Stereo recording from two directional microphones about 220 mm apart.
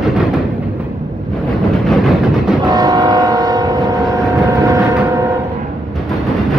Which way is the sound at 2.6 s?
15° right (ahead or behind).